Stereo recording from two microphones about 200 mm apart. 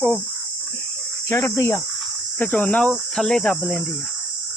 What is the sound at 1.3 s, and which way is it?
Cricket, 15° left (ahead or behind).